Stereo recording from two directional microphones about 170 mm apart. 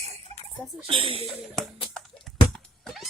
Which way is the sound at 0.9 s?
30° right (ahead or behind).